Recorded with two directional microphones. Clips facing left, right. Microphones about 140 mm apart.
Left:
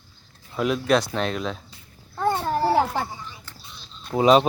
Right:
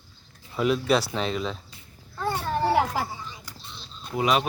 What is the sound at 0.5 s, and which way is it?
Speech, centre (ahead or behind).